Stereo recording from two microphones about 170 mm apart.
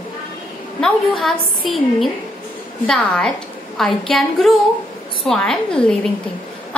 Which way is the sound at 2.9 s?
5° left (ahead or behind).